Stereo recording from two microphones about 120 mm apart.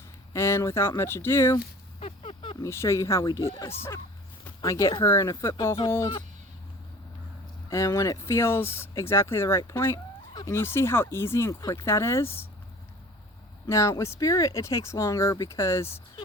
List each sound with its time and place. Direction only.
0.3 s speech: 20° left (ahead or behind)
2.0 s a sound: 55° left (ahead or behind)
2.6 s speech: 25° left (ahead or behind)
4.6 s speech: 25° left (ahead or behind)
7.7 s speech: 25° left (ahead or behind)
13.7 s speech: 25° left (ahead or behind)